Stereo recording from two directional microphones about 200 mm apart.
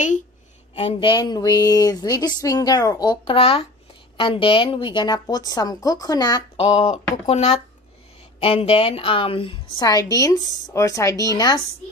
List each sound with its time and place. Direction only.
0.7 s a woman's voice: 25° left (ahead or behind)